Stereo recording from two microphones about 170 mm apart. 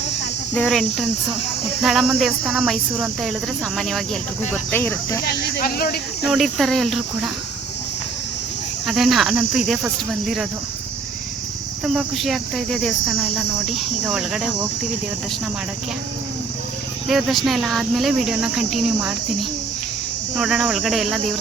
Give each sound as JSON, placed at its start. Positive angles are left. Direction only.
{"t": 0.5, "sound": "cricket", "side_deg": 0}
{"t": 4.7, "sound": "speech", "side_deg": 10}
{"t": 5.2, "sound": "speech", "side_deg": 65}
{"t": 6.2, "sound": "cricket", "side_deg": 0}
{"t": 8.9, "sound": "cricket", "side_deg": 0}
{"t": 11.9, "sound": "cricket", "side_deg": 0}
{"t": 17.1, "sound": "cricket", "side_deg": 0}